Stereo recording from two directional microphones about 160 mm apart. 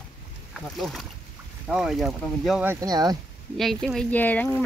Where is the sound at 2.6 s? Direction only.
25° right (ahead or behind).